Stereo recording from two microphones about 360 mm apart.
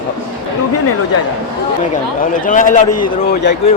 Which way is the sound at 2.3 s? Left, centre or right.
Left.